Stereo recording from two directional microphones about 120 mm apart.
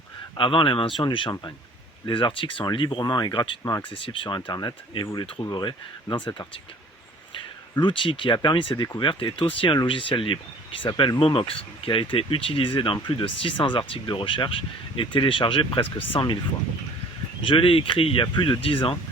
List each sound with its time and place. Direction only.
0.3 s speech: 45° left (ahead or behind)
3.6 s speech: 25° left (ahead or behind)
3.8 s speech: 45° left (ahead or behind)
7.8 s speech: 45° left (ahead or behind)
17.4 s speech: 45° left (ahead or behind)